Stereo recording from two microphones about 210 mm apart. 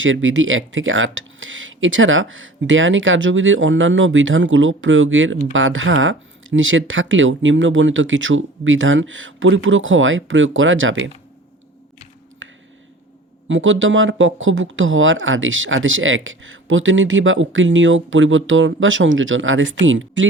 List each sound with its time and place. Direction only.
0.0 s speech: 65° right (ahead or behind)
12.4 s a sound: 65° right (ahead or behind)
13.5 s speech: 65° right (ahead or behind)